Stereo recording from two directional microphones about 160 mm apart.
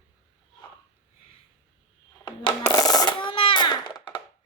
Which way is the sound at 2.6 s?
20° left (ahead or behind).